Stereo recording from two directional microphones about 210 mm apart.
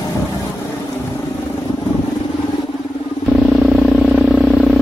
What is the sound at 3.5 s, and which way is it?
Vehicle, centre (ahead or behind).